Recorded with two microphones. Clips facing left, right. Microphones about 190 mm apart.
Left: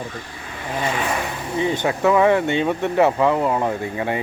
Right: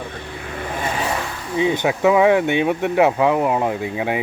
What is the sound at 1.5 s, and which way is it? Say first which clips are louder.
Speech: right 3 dB; 15° right (ahead or behind).